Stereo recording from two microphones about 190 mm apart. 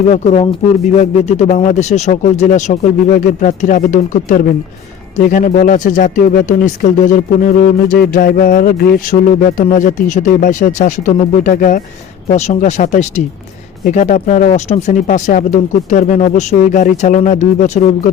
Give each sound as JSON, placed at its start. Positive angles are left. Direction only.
{"t": 0.1, "sound": "speech", "side_deg": 35}